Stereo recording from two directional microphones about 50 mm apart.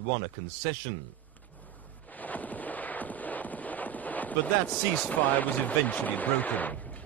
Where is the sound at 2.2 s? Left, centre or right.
Left.